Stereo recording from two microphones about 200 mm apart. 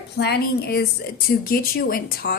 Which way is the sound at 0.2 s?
55° left (ahead or behind).